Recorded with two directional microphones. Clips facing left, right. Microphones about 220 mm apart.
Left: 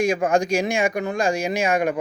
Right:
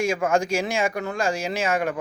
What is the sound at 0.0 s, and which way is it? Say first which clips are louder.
Speech: left 2 dB; 15° left (ahead or behind).